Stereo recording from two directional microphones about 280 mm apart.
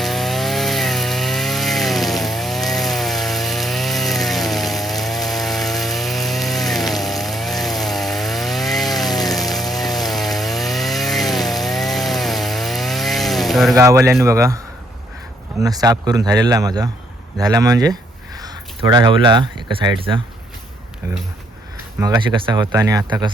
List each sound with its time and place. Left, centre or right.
0.0 s wood: centre
9.0 s chainsaw: centre
13.7 s speech: centre
15.6 s speech: centre
18.3 s a sound: centre
19.7 s speech: centre
22.0 s speech: centre